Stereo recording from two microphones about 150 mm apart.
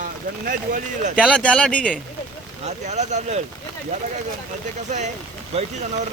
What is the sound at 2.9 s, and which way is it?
Speech, 50° right (ahead or behind).